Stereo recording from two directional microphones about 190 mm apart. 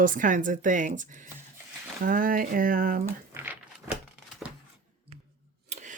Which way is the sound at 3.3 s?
10° right (ahead or behind).